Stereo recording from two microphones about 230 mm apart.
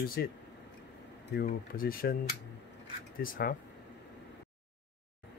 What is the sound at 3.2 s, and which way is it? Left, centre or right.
Speech, left.